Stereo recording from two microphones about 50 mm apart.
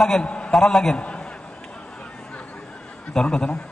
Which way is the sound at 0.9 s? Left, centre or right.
Left.